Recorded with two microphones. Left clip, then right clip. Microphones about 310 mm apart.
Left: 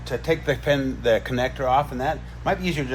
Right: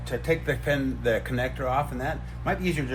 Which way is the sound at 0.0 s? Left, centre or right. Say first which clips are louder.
Left 3 dB; left.